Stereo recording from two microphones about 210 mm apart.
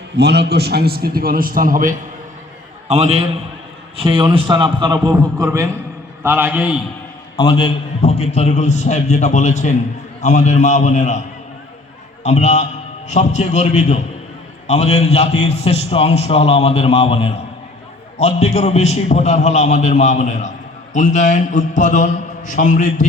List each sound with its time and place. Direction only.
0.2 s a man's voice: 50° right (ahead or behind); by 6.7 s 5° right (ahead or behind)
7.3 s a man's voice: 25° left (ahead or behind)
12.2 s a man's voice: 30° left (ahead or behind)